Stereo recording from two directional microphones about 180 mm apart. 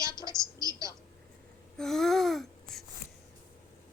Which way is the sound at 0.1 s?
25° left (ahead or behind).